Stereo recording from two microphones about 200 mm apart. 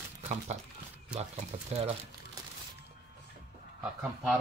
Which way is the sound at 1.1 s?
30° right (ahead or behind).